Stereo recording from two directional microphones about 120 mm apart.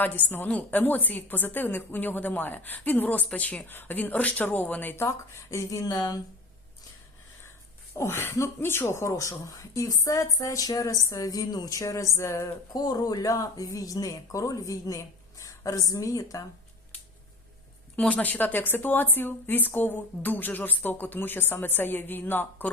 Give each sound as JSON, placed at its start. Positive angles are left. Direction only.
{"t": 0.0, "sound": "a woman's voice", "side_deg": 15}
{"t": 7.9, "sound": "speech", "side_deg": 20}
{"t": 17.9, "sound": "a woman's voice", "side_deg": 10}